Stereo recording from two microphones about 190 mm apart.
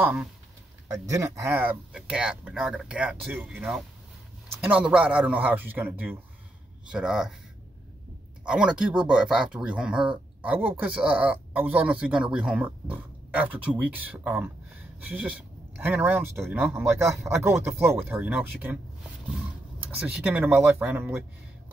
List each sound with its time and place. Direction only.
0.0 s speech: 5° right (ahead or behind)
8.5 s speech: 5° right (ahead or behind)